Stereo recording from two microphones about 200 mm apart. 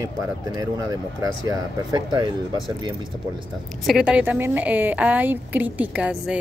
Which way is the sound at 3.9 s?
5° right (ahead or behind).